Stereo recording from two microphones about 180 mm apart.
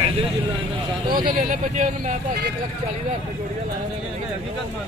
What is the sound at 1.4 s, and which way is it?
Speech, 45° right (ahead or behind).